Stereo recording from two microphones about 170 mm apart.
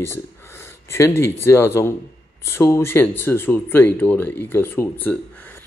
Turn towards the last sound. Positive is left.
turn(degrees=10)  # may be behind; listen again after turning